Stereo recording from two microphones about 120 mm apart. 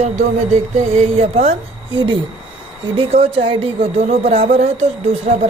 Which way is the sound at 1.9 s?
45° right (ahead or behind).